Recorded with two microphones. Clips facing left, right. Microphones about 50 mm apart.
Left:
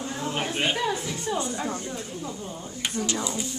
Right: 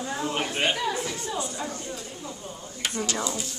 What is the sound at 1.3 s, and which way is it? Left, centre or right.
Speech, left.